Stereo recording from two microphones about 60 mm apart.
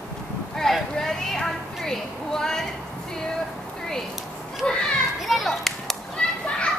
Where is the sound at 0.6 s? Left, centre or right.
Centre.